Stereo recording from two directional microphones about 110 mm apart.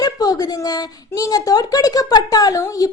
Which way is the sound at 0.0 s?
35° left (ahead or behind).